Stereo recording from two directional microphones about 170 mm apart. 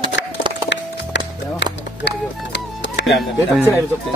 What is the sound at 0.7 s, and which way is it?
Music, 90° left.